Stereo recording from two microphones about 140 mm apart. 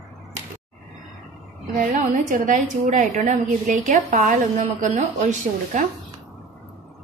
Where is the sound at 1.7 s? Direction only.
65° right (ahead or behind).